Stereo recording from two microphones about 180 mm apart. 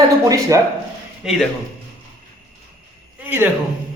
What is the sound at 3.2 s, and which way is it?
Speech, 10° right (ahead or behind).